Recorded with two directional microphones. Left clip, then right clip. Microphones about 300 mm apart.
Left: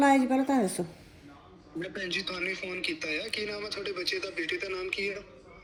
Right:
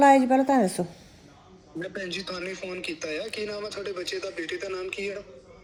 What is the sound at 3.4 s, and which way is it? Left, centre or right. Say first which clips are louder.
Speech: right 2 dB; centre.